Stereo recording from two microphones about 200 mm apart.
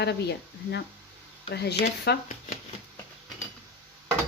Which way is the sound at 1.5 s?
55° left (ahead or behind).